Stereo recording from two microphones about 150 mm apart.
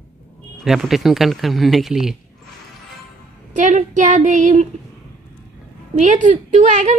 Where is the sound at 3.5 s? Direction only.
55° right (ahead or behind).